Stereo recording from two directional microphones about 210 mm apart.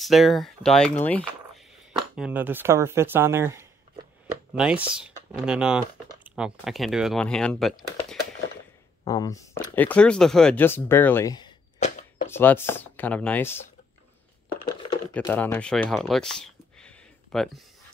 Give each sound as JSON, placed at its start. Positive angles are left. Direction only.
{"t": 0.0, "sound": "speech", "side_deg": 0}
{"t": 2.1, "sound": "speech", "side_deg": -5}
{"t": 9.0, "sound": "speech", "side_deg": 15}
{"t": 11.8, "sound": "a sound", "side_deg": 35}
{"t": 12.3, "sound": "speech", "side_deg": 10}
{"t": 15.1, "sound": "speech", "side_deg": 10}